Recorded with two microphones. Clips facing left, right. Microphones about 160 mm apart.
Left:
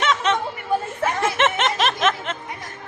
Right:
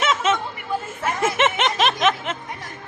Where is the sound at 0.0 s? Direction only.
5° right (ahead or behind).